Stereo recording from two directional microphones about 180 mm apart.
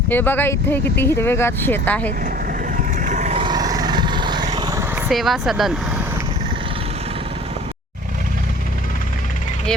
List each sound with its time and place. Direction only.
0.1 s speech: 10° left (ahead or behind)
3.0 s vehicle: 45° right (ahead or behind)
3.3 s vehicle: 25° right (ahead or behind)
5.0 s speech: centre (ahead or behind)